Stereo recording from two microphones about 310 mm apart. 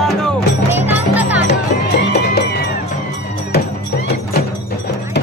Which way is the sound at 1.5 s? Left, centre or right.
Left.